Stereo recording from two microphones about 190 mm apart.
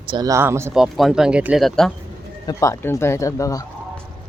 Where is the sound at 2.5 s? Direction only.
15° left (ahead or behind).